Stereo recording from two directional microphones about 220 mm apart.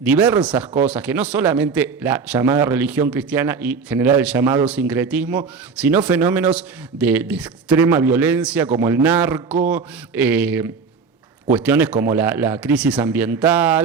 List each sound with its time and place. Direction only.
0.0 s a man's voice: 5° right (ahead or behind)